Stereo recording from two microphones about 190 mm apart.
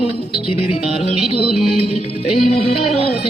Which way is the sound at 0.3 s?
30° left (ahead or behind).